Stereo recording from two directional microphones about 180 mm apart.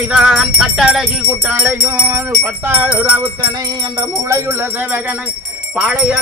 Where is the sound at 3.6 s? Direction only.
20° right (ahead or behind).